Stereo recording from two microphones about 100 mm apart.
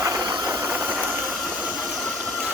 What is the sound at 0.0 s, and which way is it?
Engine, 40° right (ahead or behind).